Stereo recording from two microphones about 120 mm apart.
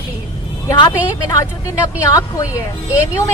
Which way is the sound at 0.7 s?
35° left (ahead or behind).